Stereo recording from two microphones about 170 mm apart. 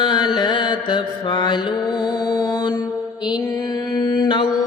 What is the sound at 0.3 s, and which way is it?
Mantra, 25° left (ahead or behind).